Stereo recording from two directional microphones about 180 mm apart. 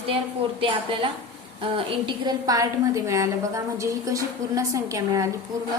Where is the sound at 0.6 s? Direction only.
25° right (ahead or behind).